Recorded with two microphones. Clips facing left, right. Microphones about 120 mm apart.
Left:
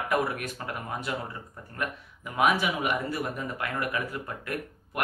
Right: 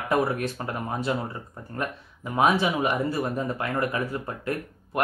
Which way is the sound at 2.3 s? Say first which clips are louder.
Right 3 dB; 30° right (ahead or behind).